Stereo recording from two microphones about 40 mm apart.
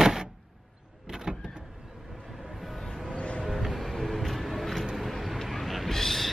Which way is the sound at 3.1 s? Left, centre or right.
Left.